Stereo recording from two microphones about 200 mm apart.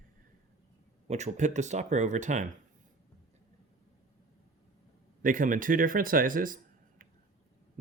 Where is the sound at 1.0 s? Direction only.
35° right (ahead or behind).